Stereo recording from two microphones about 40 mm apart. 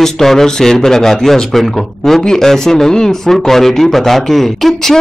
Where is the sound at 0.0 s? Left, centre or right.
Centre.